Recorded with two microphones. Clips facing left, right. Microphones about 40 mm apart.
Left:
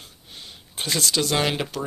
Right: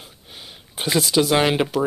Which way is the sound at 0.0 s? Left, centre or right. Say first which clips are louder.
Right 2 dB; centre.